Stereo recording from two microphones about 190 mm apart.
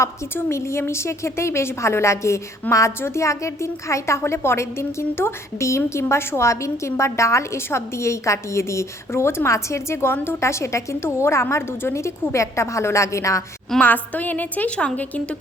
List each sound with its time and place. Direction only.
0.0 s a woman's voice: 15° left (ahead or behind)